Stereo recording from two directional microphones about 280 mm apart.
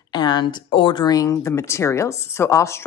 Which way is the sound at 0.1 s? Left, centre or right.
Centre.